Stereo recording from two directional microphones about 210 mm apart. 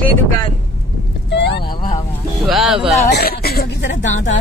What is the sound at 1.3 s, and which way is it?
Vehicle, 55° left (ahead or behind).